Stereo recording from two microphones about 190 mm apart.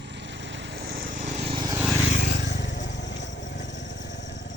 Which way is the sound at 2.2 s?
60° left (ahead or behind).